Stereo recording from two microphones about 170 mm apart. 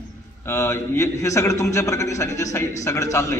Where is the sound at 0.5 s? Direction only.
15° left (ahead or behind).